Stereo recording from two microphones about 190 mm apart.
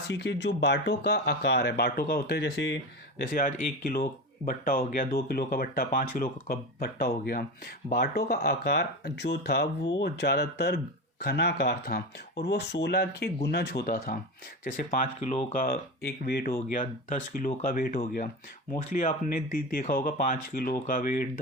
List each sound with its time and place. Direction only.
0.1 s speech: 70° left (ahead or behind)
3.2 s speech: 50° left (ahead or behind)
15.0 s speech: 35° left (ahead or behind)
15.5 s speech: 50° left (ahead or behind)